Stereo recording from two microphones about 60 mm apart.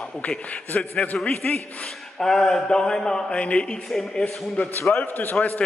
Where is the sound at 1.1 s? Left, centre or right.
Centre.